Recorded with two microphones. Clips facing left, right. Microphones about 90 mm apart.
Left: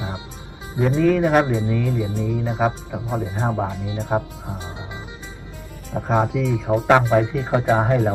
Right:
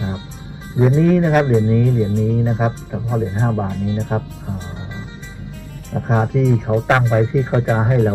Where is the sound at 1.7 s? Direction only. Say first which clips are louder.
Right 6 dB; 15° right (ahead or behind).